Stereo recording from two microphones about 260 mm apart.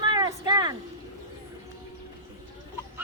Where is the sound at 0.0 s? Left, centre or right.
Centre.